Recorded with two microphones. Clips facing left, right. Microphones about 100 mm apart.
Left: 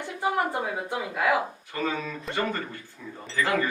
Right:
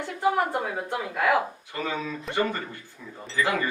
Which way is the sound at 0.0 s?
10° left (ahead or behind).